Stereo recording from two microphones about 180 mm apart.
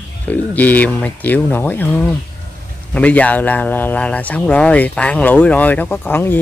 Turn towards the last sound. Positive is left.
turn(degrees=10)  # may be behind; listen again after turning